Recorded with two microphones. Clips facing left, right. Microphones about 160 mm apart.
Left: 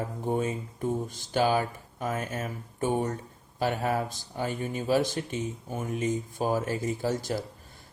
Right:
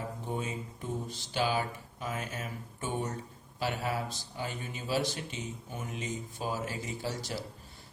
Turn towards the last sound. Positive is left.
turn(degrees=50)  # may be behind; listen again after turning